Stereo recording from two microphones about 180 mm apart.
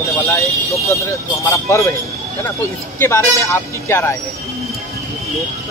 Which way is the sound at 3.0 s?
15° left (ahead or behind).